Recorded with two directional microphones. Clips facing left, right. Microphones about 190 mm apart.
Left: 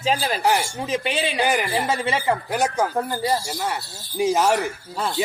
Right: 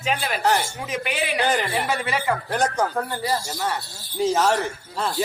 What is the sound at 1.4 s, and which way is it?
Speech, 10° left (ahead or behind).